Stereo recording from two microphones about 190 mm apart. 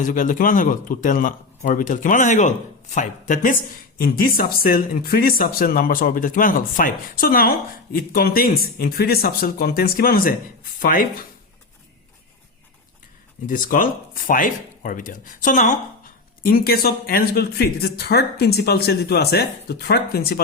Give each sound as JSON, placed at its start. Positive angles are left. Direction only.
{"t": 0.0, "sound": "speech", "side_deg": 45}
{"t": 13.5, "sound": "speech", "side_deg": 45}